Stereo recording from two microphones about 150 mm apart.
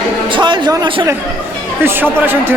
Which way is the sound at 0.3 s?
30° right (ahead or behind).